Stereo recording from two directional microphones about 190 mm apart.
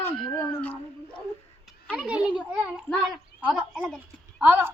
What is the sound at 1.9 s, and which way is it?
Speech, 5° right (ahead or behind).